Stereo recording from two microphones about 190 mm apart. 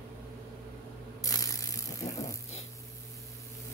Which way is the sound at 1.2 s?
20° left (ahead or behind).